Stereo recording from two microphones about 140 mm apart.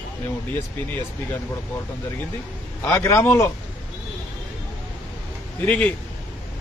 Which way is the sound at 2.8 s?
20° left (ahead or behind).